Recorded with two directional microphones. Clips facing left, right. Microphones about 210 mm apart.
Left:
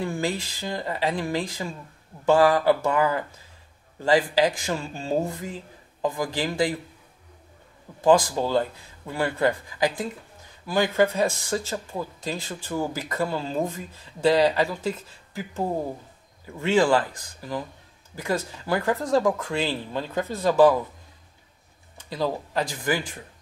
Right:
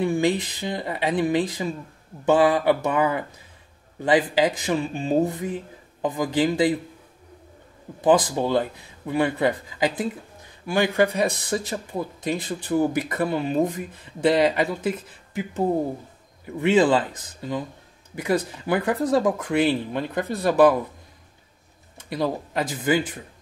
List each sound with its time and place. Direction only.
0.0 s a man's voice: 15° right (ahead or behind)
8.0 s a man's voice: 20° right (ahead or behind)
22.1 s a man's voice: 20° right (ahead or behind)